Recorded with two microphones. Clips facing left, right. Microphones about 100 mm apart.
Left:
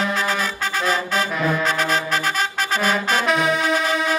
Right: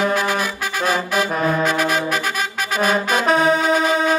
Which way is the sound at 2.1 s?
5° right (ahead or behind).